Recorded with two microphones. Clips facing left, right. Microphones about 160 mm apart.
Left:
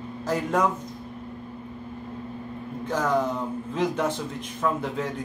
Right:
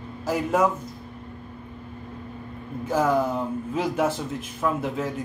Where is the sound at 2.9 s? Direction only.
10° right (ahead or behind).